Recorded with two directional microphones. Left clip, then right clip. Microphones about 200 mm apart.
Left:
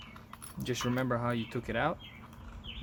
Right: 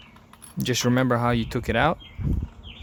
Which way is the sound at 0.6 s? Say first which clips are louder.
Right 10 dB; 50° right (ahead or behind).